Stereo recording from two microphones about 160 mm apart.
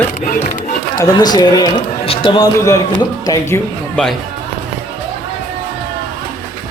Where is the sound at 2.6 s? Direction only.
20° left (ahead or behind).